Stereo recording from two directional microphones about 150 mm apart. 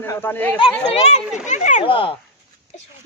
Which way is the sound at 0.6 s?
40° left (ahead or behind).